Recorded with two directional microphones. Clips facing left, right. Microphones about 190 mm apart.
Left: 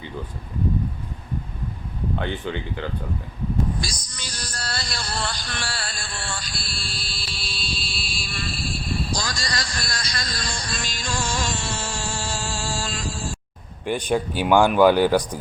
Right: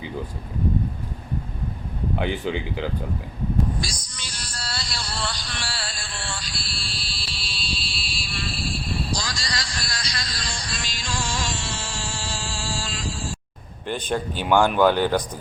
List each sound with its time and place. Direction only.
2.1 s speech: 10° right (ahead or behind)
3.8 s music: 40° left (ahead or behind)
13.8 s speech: 10° left (ahead or behind)